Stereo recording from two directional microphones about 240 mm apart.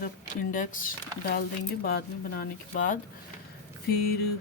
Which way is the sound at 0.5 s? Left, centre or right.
Left.